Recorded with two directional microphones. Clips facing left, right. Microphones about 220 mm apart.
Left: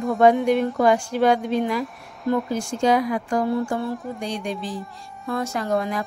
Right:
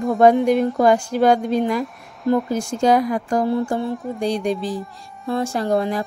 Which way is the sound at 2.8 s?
40° right (ahead or behind).